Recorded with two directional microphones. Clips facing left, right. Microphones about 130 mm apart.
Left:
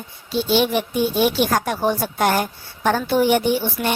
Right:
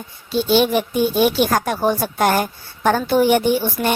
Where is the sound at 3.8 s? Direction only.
35° right (ahead or behind).